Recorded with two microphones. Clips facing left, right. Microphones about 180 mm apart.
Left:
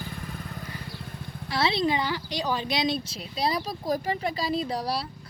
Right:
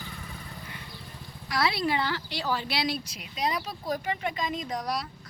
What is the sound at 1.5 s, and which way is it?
A woman's voice, 25° left (ahead or behind).